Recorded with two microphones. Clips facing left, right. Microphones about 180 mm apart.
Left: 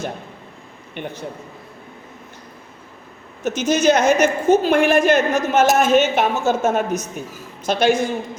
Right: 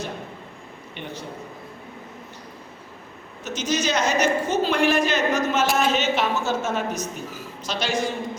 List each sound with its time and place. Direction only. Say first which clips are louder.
1.0 s a woman's voice: left 7 dB; 50° left (ahead or behind)
3.4 s a woman's voice: left 8 dB; 50° left (ahead or behind)